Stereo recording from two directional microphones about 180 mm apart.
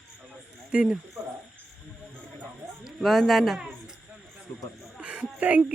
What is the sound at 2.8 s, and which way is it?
Speech, centre (ahead or behind).